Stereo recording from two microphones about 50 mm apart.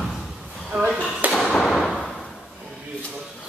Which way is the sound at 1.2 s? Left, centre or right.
Right.